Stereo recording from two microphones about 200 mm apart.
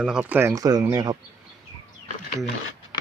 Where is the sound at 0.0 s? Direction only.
5° right (ahead or behind).